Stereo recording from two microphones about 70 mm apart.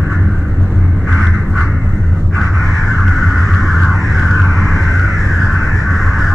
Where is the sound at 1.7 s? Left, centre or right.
Centre.